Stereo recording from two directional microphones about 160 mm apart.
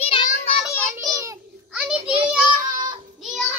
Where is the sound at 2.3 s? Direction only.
5° right (ahead or behind).